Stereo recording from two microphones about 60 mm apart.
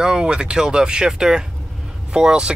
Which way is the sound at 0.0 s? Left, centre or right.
Centre.